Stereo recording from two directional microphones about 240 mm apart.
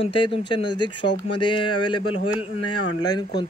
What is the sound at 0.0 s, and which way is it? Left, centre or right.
Speech, left.